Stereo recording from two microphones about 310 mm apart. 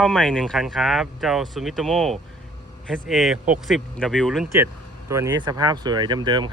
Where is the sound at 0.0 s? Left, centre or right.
Centre.